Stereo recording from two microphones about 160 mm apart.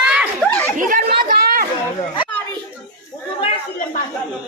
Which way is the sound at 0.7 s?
55° right (ahead or behind).